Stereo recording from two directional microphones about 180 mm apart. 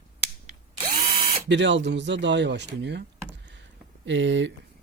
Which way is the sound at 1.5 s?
85° right.